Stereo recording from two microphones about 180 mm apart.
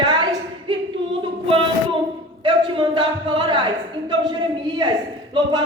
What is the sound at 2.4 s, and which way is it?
A woman's voice, 30° right (ahead or behind).